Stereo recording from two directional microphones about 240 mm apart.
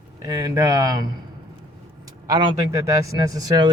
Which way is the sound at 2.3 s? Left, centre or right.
Centre.